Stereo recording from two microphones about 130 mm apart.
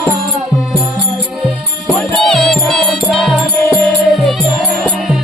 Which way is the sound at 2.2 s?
5° left (ahead or behind).